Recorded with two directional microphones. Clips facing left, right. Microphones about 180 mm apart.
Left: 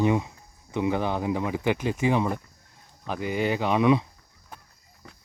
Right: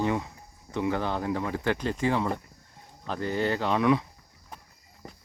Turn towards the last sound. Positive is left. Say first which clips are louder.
# even
turn(degrees=0)  # may be behind; listen again after turning